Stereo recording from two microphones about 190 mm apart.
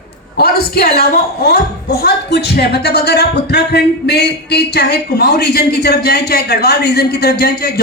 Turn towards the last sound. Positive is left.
turn(degrees=55)  # may be behind; listen again after turning